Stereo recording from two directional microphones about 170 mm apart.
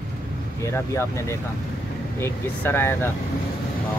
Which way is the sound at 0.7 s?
15° left (ahead or behind).